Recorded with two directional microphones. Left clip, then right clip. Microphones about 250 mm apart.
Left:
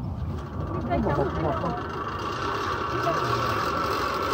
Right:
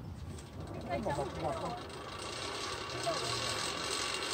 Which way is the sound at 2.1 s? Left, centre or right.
Centre.